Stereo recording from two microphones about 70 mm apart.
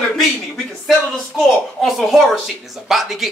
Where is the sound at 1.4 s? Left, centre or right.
Centre.